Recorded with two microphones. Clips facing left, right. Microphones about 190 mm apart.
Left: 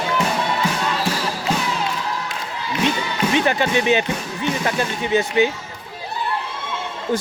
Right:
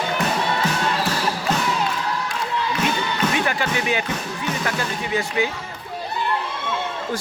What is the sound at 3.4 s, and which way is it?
Speech, 25° left (ahead or behind).